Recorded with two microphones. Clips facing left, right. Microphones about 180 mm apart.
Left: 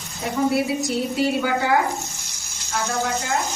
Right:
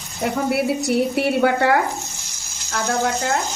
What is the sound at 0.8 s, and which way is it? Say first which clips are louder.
Speech: right 3 dB; 65° right (ahead or behind).